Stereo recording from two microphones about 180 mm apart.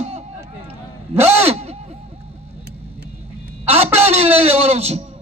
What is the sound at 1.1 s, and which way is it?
Speech, 15° right (ahead or behind).